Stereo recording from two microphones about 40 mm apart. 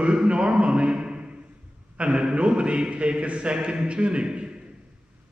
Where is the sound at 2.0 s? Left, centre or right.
Right.